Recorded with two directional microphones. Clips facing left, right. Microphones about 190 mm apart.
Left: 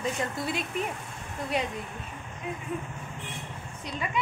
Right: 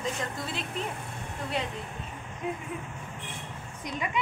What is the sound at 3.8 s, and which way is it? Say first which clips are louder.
Speech: even; 15° right (ahead or behind).